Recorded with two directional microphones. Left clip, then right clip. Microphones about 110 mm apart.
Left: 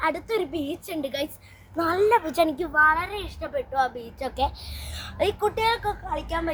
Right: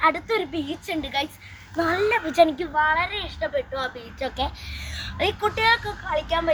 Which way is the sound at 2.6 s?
30° left (ahead or behind).